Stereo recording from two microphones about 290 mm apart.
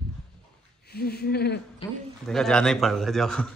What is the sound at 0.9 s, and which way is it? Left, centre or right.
Speech, left.